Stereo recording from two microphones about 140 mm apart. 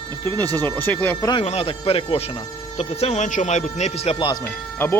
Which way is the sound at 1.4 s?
45° left (ahead or behind).